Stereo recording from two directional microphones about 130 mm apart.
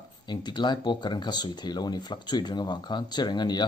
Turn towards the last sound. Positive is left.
turn(degrees=35)  # may be behind; listen again after turning